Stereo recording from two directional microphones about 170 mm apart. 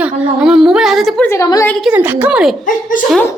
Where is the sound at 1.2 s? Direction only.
15° left (ahead or behind).